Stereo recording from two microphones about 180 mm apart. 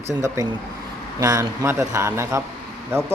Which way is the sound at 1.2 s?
20° right (ahead or behind).